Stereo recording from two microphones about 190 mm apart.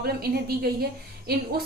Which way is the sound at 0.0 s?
55° right (ahead or behind).